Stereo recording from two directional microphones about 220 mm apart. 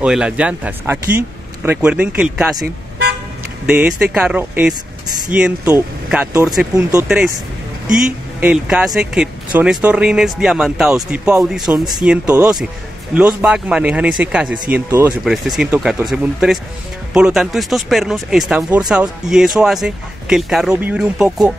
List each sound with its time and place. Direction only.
0.0 s speech: 5° right (ahead or behind)
3.6 s speech: 5° right (ahead or behind)
7.9 s speech: 5° right (ahead or behind)